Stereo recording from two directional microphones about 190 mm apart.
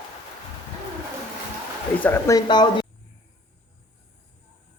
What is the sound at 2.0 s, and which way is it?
Speech, 15° left (ahead or behind).